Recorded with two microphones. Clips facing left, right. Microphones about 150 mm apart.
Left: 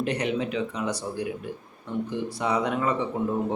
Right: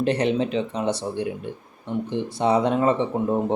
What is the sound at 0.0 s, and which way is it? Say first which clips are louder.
Speech: right 5 dB; 30° right (ahead or behind).